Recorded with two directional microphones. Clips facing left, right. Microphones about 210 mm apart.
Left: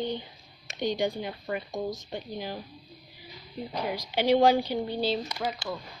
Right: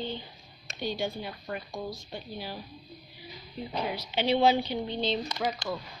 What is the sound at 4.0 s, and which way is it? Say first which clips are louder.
A woman's voice: left 4 dB; 10° left (ahead or behind).